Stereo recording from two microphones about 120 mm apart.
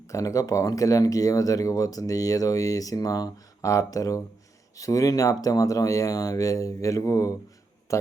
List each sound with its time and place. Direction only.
0.1 s a man's voice: 25° left (ahead or behind)